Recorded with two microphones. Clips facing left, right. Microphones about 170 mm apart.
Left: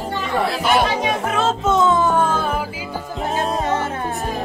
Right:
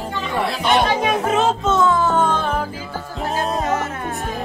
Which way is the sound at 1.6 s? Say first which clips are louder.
Left 1 dB; 20° left (ahead or behind).